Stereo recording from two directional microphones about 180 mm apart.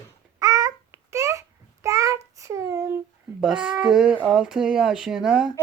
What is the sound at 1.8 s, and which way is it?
Child singing, 15° right (ahead or behind).